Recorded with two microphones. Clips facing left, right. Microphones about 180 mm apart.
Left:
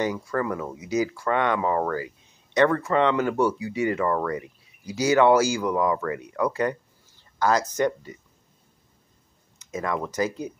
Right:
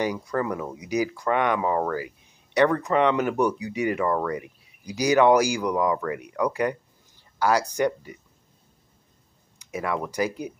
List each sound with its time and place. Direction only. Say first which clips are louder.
0.0 s speech: even; 15° right (ahead or behind)
9.6 s speech: even; 10° right (ahead or behind)